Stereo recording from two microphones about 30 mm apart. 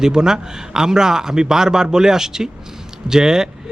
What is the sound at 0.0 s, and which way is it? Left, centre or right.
A man's voice, right.